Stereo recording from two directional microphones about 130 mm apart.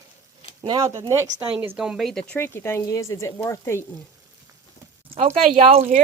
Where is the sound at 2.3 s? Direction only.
20° left (ahead or behind).